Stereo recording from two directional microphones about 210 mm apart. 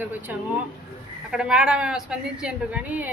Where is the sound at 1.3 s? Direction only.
5° right (ahead or behind).